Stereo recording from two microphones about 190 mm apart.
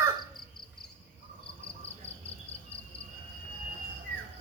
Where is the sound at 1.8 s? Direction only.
30° left (ahead or behind).